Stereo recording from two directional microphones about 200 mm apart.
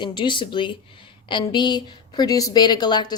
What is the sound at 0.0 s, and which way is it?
A woman's voice, 25° left (ahead or behind).